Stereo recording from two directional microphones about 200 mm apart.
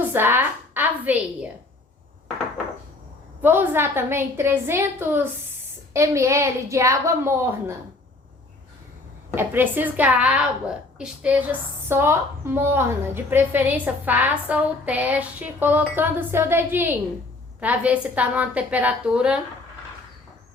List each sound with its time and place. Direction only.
0.1 s a woman's voice: 10° right (ahead or behind)
3.4 s a woman's voice: 10° right (ahead or behind)
9.3 s a woman's voice: 10° right (ahead or behind)